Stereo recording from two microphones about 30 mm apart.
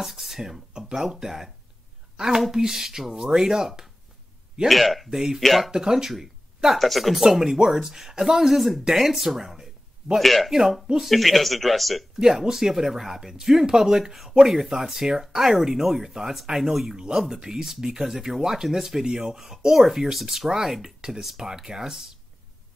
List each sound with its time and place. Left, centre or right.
0.0 s speech: centre
0.7 s speech: right
1.2 s a woman's voice: centre
4.6 s speech: centre
5.1 s speech: centre
5.4 s speech: centre
5.7 s speech: right
6.7 s speech: centre
7.2 s speech: centre
10.2 s speech: centre
12.2 s speech: centre
19.0 s speech: right
19.3 s speech: centre